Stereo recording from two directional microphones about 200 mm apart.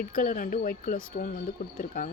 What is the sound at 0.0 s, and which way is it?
Speech, 45° left (ahead or behind).